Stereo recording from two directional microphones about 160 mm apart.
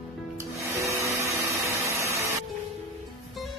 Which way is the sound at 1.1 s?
15° right (ahead or behind).